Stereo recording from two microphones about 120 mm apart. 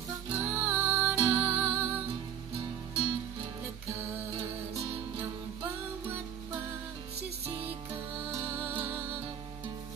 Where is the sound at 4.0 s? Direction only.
20° right (ahead or behind).